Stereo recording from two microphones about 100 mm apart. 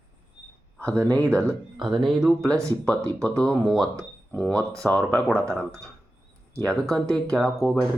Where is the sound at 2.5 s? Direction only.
30° right (ahead or behind).